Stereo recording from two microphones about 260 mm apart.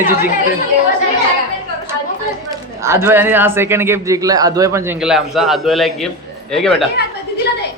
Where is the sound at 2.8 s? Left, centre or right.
Centre.